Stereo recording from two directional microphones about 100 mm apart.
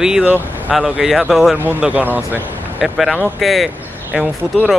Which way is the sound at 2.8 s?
Centre (ahead or behind).